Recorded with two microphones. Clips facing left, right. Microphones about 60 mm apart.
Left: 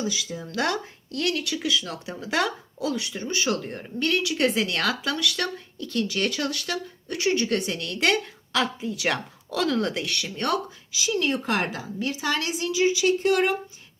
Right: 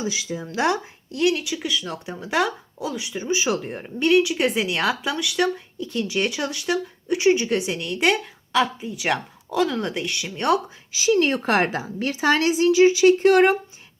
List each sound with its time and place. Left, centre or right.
0.0 s speech: right
10.9 s speech: right